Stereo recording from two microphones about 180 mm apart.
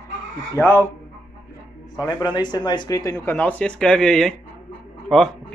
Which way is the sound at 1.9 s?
20° left (ahead or behind).